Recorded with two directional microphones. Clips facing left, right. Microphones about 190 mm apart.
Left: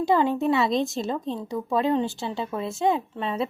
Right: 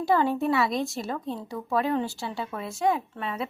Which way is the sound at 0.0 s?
20° left (ahead or behind).